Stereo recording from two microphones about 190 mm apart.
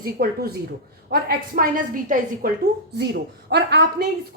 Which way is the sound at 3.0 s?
60° right (ahead or behind).